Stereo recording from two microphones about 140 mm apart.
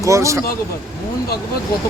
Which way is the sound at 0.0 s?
20° right (ahead or behind).